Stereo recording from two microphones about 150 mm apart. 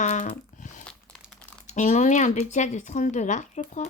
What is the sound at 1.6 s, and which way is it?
Speech, 55° left (ahead or behind).